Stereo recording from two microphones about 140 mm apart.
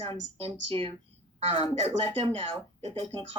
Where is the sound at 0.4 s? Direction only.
45° right (ahead or behind).